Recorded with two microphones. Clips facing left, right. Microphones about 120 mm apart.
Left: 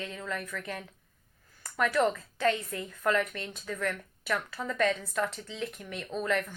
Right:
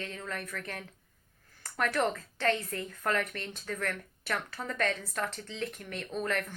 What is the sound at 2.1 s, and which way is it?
A woman's voice, 40° right (ahead or behind).